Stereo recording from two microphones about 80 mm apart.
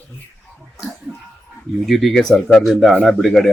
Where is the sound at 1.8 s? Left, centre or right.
Centre.